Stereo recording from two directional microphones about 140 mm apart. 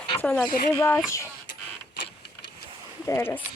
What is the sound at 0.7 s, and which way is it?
Speech, 15° left (ahead or behind).